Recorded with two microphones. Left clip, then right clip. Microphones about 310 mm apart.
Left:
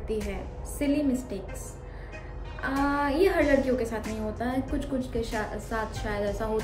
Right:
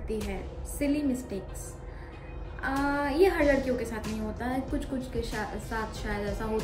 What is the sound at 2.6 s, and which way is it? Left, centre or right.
A woman's voice, centre.